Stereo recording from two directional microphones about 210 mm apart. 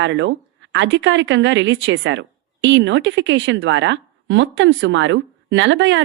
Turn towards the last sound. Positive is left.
turn(degrees=-60)  # may be behind; listen again after turning